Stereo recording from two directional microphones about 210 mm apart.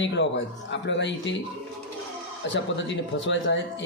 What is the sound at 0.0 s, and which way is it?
Speech, 60° left (ahead or behind).